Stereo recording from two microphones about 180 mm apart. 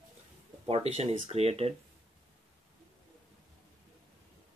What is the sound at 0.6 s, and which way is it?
Speech, 35° right (ahead or behind).